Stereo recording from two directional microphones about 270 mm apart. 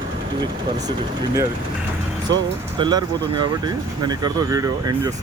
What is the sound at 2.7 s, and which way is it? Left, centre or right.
Speech, centre.